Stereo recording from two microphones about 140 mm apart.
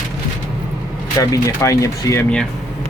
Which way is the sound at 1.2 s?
25° left (ahead or behind).